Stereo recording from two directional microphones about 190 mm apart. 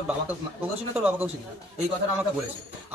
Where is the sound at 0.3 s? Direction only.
10° right (ahead or behind).